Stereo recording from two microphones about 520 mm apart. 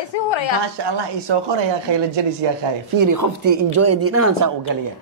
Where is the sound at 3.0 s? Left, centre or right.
Right.